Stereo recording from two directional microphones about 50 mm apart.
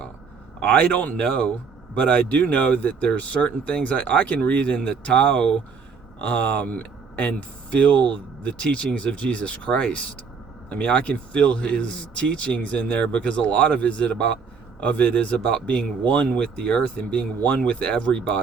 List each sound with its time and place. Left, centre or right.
0.7 s speech: left
2.0 s speech: left